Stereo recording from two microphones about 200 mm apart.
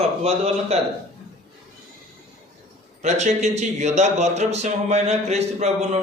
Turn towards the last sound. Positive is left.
turn(degrees=-35)  # may be behind; listen again after turning